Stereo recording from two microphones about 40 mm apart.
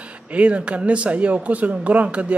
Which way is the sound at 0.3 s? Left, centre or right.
Right.